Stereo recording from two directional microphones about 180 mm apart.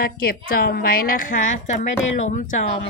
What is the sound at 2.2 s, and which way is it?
Speech, 45° left (ahead or behind).